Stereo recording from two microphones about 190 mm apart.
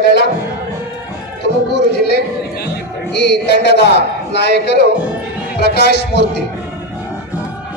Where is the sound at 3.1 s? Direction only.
65° left (ahead or behind).